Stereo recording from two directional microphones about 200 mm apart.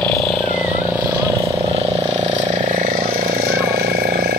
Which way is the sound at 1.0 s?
15° right (ahead or behind).